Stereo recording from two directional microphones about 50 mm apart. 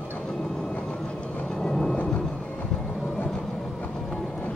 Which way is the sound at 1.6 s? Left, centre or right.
Centre.